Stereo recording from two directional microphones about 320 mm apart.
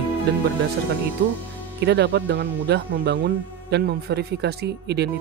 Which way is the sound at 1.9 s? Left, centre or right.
Right.